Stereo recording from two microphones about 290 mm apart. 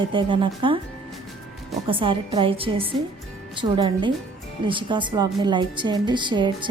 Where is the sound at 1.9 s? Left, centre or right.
Centre.